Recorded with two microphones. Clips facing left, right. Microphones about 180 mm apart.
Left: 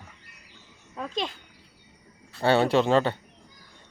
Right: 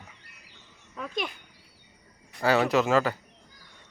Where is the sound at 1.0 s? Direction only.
25° left (ahead or behind).